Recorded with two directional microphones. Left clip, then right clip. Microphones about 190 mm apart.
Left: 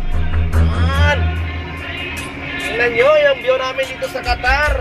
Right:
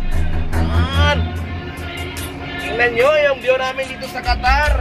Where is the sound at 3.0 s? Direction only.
10° right (ahead or behind).